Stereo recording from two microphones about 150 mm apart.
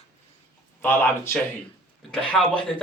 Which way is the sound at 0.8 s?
15° left (ahead or behind).